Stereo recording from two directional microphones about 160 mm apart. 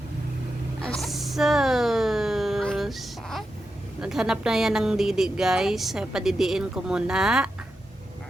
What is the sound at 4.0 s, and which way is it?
Speech, 5° right (ahead or behind).